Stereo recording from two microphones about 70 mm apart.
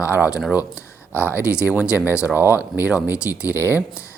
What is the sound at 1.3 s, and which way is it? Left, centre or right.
Speech, left.